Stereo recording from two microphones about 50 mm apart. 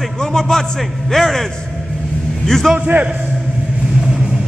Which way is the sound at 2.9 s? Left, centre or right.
Right.